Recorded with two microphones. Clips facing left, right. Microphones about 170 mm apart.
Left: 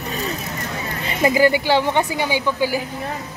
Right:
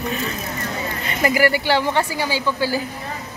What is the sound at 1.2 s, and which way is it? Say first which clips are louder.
A woman's voice: left 2 dB; 20° left (ahead or behind).